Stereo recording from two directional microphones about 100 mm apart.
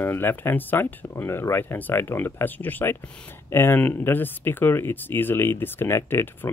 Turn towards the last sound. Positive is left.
turn(degrees=25)  # may be behind; listen again after turning